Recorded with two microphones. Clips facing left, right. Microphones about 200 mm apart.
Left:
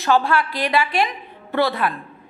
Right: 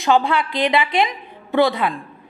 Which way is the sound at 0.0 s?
15° right (ahead or behind).